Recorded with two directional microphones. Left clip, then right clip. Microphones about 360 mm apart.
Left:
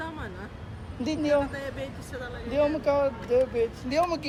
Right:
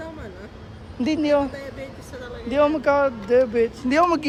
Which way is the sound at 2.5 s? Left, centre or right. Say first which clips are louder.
Right 6 dB; right.